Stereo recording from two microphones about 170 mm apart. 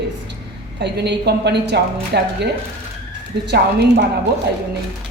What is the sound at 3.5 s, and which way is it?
Speech, 80° right.